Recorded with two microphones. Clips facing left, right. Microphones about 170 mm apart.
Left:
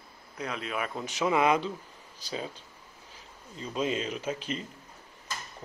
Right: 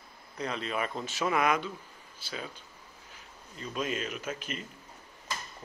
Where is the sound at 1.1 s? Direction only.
15° left (ahead or behind); by 2.5 s 35° left (ahead or behind).